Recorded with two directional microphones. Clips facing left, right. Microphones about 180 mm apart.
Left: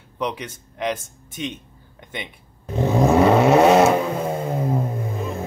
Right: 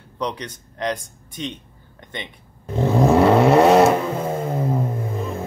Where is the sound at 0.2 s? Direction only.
5° left (ahead or behind).